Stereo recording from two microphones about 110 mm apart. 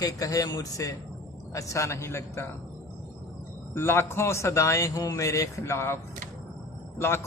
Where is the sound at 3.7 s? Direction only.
20° left (ahead or behind).